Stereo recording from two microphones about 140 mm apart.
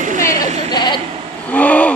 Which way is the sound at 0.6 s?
30° left (ahead or behind).